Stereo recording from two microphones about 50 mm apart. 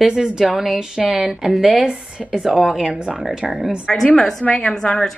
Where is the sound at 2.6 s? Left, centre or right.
Centre.